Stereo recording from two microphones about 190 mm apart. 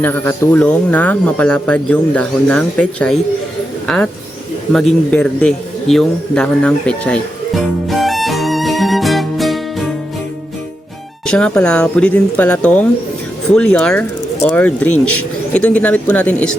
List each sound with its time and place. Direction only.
0.0 s a man's voice: 10° left (ahead or behind)
11.3 s speech: 5° left (ahead or behind)